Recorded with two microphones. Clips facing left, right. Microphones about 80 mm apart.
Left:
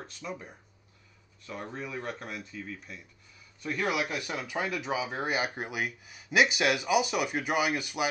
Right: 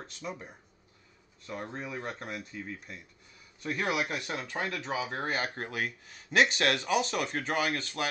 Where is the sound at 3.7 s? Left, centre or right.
Centre.